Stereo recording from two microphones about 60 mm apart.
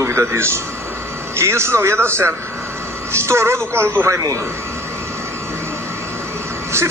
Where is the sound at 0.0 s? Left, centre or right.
Right.